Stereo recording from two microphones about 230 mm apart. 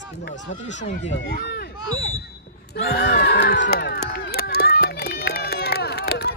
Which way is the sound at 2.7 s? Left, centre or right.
Left.